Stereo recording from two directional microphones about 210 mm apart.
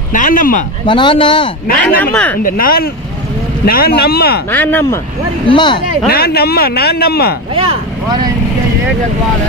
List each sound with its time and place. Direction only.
0.1 s speech: 40° left (ahead or behind)
0.8 s speech: 20° left (ahead or behind)
2.0 s speech: 10° left (ahead or behind)
2.4 s speech: 45° left (ahead or behind)
4.5 s speech: 10° left (ahead or behind)
5.5 s speech: 20° left (ahead or behind)
6.0 s speech: 45° left (ahead or behind)
7.5 s speech: 25° right (ahead or behind)